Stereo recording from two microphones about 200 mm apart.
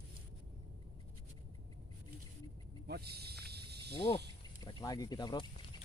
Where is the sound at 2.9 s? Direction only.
55° right (ahead or behind).